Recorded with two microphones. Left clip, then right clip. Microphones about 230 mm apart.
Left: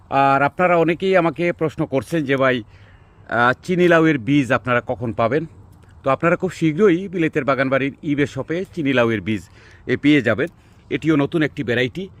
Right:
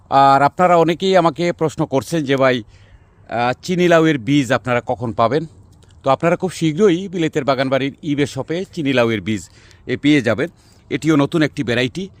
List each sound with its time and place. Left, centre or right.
0.1 s a man's voice: right
3.2 s a man's voice: centre
9.8 s speech: centre
10.1 s speech: right